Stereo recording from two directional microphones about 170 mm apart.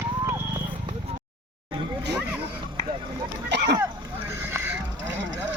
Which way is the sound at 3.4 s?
85° right.